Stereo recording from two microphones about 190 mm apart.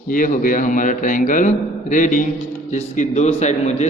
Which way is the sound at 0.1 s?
45° left (ahead or behind).